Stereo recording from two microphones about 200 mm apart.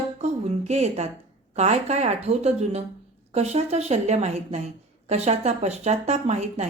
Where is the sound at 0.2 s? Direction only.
35° right (ahead or behind).